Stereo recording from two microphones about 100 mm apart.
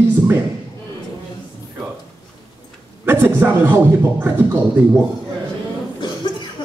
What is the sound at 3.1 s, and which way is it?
Speech, 20° right (ahead or behind).